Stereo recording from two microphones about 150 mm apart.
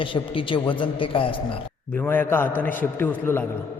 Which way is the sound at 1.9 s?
15° left (ahead or behind).